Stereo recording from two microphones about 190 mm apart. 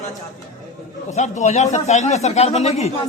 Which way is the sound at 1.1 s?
40° left (ahead or behind).